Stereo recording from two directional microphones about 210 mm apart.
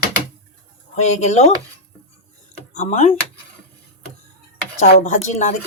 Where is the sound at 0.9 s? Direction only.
30° left (ahead or behind).